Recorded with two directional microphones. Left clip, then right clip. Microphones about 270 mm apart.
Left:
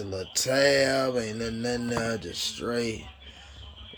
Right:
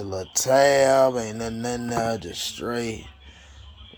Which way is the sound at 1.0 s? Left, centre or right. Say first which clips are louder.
Right 7 dB; right.